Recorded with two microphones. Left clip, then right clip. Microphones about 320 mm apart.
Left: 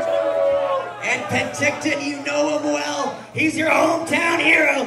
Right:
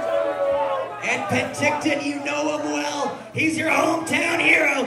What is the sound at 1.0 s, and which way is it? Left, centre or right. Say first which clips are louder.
Music: left 1 dB; left.